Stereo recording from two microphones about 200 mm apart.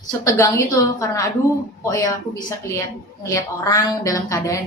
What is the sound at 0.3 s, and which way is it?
A woman's voice, 15° left (ahead or behind).